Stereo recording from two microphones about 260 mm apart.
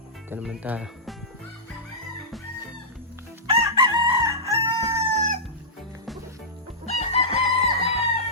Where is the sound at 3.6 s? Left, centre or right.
Centre.